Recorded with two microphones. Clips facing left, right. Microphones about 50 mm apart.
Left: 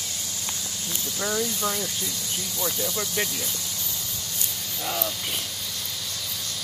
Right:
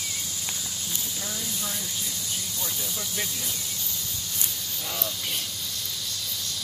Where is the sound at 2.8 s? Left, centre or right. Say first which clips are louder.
Left 6 dB; left.